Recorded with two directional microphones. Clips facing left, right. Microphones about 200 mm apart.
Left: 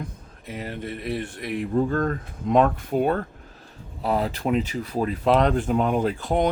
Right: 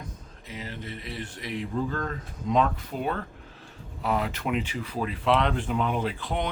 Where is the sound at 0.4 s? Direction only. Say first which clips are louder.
Left 6 dB; 55° left (ahead or behind).